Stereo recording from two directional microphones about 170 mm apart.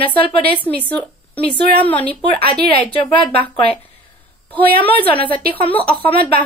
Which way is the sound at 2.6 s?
35° left (ahead or behind).